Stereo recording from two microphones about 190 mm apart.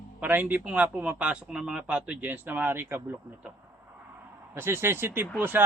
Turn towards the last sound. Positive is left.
turn(degrees=-10)  # may be behind; listen again after turning